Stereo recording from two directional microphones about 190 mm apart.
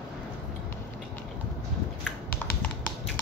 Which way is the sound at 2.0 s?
5° left (ahead or behind).